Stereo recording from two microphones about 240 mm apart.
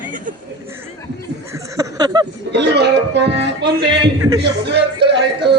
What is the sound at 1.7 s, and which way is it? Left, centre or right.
Speech, centre.